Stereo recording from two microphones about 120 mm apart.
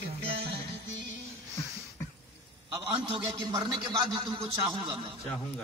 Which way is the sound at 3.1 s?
40° right (ahead or behind).